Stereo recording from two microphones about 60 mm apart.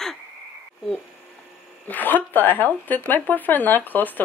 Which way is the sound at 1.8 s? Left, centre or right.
Left.